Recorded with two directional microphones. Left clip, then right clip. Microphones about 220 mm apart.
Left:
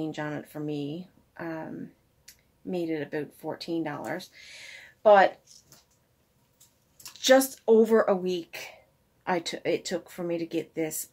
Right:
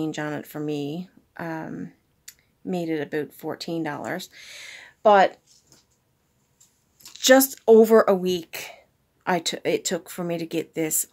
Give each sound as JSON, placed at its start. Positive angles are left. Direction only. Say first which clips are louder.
{"t": 0.0, "sound": "speech", "louder": "right 5 dB", "side_deg": -45}
{"t": 7.2, "sound": "speech", "louder": "right 4 dB", "side_deg": -45}